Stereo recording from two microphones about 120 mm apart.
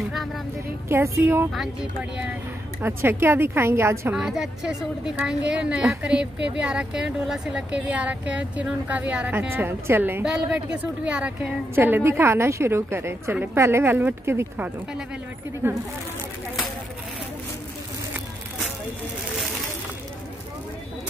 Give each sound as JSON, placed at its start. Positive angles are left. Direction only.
{"t": 0.8, "sound": "a woman's voice", "side_deg": -20}
{"t": 1.5, "sound": "speech", "side_deg": 0}
{"t": 2.8, "sound": "a woman's voice", "side_deg": -20}
{"t": 4.1, "sound": "a woman's voice", "side_deg": -5}